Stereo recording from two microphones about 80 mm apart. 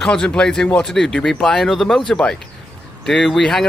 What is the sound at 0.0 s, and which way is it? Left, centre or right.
Speech, centre.